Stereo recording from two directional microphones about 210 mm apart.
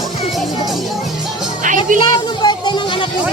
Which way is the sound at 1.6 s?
40° right (ahead or behind).